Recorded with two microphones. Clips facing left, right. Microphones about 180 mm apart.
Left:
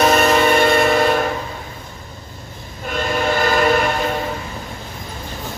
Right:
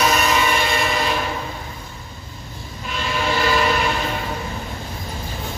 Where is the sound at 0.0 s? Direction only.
50° left (ahead or behind).